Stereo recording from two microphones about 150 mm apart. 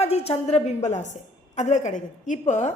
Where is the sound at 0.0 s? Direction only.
45° left (ahead or behind).